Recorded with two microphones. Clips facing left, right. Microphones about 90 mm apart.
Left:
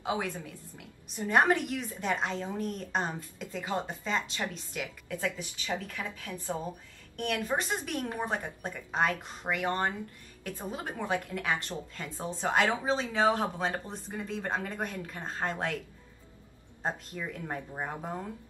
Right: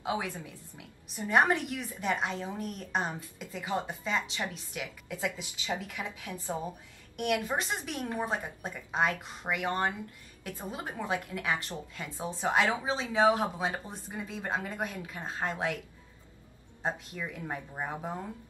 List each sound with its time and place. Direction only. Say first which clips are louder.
0.0 s a woman's voice: left 1 dB; 5° right (ahead or behind)
7.7 s a woman's voice: left 1 dB; 5° right (ahead or behind)
16.8 s speech: even; 5° right (ahead or behind)